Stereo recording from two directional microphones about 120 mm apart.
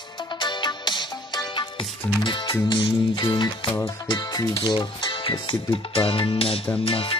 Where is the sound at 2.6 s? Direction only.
45° left (ahead or behind).